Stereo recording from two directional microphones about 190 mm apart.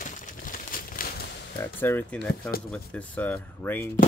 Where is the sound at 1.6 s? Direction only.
10° left (ahead or behind).